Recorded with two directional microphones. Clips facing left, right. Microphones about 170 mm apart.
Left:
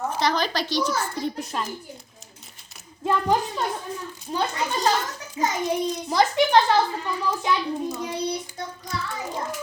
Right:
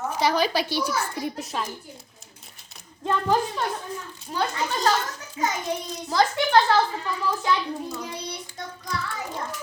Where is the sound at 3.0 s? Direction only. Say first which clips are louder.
Left 2 dB; 5° left (ahead or behind).